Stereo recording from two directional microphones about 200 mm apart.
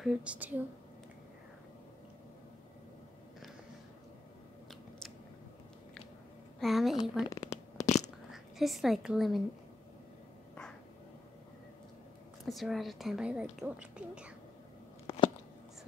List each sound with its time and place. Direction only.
0.0 s a woman's voice: 5° right (ahead or behind)
6.6 s a woman's voice: centre (ahead or behind)
7.2 s shuffling cards: 15° left (ahead or behind)
7.8 s a sound: 35° left (ahead or behind)
8.3 s a woman's voice: centre (ahead or behind)
12.4 s a woman's voice: centre (ahead or behind)
15.1 s a sound: 30° left (ahead or behind)